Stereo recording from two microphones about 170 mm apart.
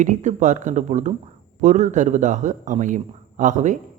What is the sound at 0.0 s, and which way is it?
A man's voice, 45° right (ahead or behind).